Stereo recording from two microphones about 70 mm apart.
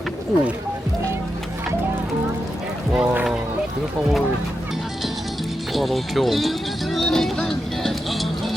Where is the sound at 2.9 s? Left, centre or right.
Centre.